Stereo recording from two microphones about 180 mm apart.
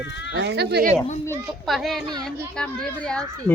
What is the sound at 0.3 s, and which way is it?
Speech, 70° right (ahead or behind).